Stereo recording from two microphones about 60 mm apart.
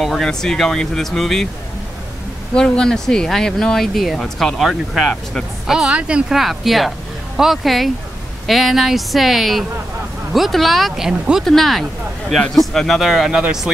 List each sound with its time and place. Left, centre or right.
0.0 s speech: centre
2.5 s speech: centre
5.0 s speech: centre
5.7 s speech: centre
6.3 s speech: centre
11.1 s speech: centre
11.4 s speech: centre